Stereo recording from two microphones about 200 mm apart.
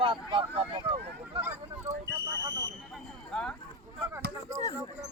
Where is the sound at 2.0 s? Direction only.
55° right (ahead or behind).